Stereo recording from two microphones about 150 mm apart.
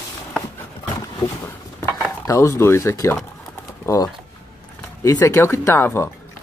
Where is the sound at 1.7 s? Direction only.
20° left (ahead or behind).